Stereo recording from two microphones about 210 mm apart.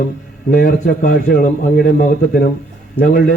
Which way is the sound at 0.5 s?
40° left (ahead or behind).